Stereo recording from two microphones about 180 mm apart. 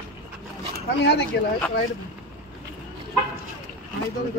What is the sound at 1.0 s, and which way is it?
Speech, 70° left (ahead or behind).